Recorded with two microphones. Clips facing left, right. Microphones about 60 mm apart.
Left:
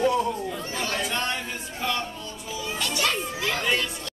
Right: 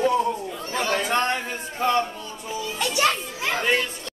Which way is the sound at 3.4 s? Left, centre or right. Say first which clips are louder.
Right 4 dB; right.